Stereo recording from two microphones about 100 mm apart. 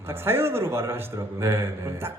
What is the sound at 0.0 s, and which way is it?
A man's voice, 25° right (ahead or behind).